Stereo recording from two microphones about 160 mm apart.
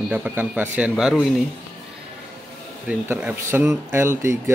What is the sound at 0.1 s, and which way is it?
Speech, 10° right (ahead or behind).